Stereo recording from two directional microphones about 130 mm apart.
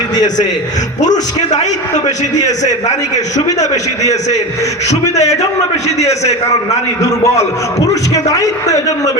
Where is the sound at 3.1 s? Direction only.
65° left (ahead or behind).